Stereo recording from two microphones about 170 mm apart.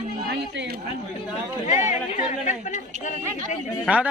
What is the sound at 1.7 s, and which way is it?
Speech, 45° left (ahead or behind).